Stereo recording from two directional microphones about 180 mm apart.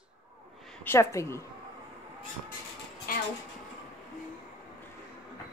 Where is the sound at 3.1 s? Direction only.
55° left (ahead or behind).